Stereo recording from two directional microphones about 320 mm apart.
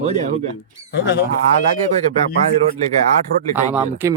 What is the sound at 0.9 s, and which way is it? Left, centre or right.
Speech, left.